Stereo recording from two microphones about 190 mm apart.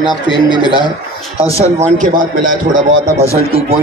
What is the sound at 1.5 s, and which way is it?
A man's voice, 35° right (ahead or behind).